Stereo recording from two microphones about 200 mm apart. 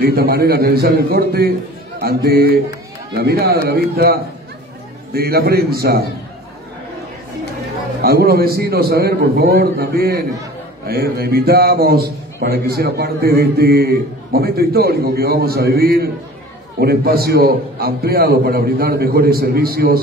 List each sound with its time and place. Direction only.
0.0 s a man's voice: 50° right (ahead or behind)
8.0 s a man's voice: 50° right (ahead or behind)